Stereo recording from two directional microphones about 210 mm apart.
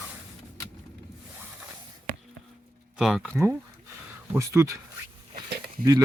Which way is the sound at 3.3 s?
15° right (ahead or behind).